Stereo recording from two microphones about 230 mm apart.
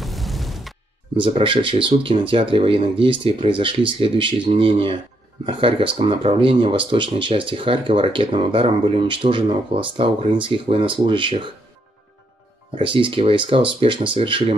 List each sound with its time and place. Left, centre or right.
0.0 s explosion: centre
1.1 s speech: right
12.7 s speech: right